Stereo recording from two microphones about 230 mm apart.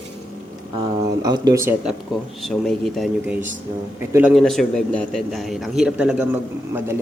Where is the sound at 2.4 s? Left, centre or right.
Centre.